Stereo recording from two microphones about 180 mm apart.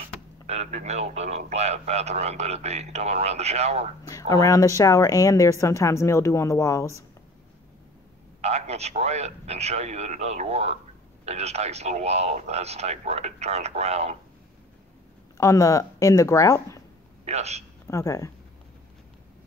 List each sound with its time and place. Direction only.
0.5 s speech: 40° right (ahead or behind)
4.1 s speech: 20° left (ahead or behind)
8.4 s speech: 35° right (ahead or behind)
15.3 s speech: 20° left (ahead or behind)
17.2 s a man's voice: 35° right (ahead or behind)
17.8 s speech: 15° left (ahead or behind)